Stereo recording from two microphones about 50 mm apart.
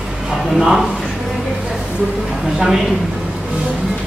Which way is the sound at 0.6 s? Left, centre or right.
Centre.